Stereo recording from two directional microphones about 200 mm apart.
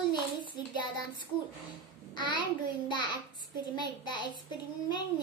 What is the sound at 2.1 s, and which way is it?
A child's voice, 20° left (ahead or behind).